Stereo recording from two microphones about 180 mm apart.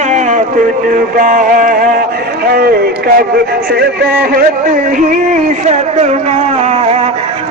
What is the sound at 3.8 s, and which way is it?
Speech, 60° right (ahead or behind).